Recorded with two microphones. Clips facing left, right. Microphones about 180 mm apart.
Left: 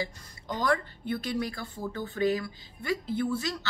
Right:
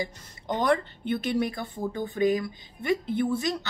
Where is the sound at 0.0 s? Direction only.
20° right (ahead or behind).